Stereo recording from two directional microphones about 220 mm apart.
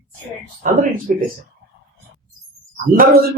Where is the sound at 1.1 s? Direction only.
35° right (ahead or behind).